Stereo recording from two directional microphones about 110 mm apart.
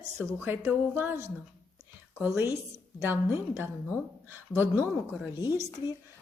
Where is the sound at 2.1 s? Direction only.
20° right (ahead or behind).